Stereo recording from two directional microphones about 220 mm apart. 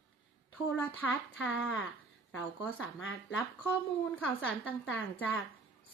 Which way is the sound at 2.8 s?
60° left (ahead or behind).